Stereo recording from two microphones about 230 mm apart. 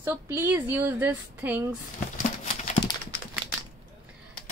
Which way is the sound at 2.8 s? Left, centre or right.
Left.